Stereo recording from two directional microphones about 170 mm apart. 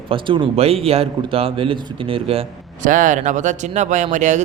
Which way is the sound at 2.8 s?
50° right (ahead or behind).